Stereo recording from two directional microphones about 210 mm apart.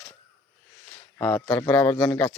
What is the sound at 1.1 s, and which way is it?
Speech, 5° left (ahead or behind).